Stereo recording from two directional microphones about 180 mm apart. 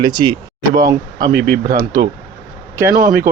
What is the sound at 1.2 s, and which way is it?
Speech, 50° right (ahead or behind).